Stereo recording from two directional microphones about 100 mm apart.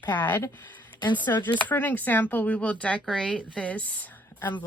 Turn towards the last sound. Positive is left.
turn(degrees=20)  # may be behind; listen again after turning